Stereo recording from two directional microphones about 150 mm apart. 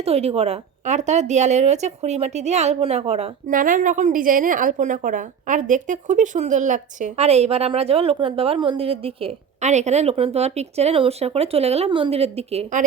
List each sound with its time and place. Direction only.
0.0 s a woman's voice: 40° right (ahead or behind)
3.5 s a woman's voice: 65° right (ahead or behind); by 12.8 s 45° right (ahead or behind)